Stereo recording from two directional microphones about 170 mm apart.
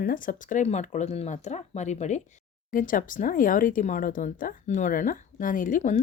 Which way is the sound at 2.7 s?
55° left (ahead or behind).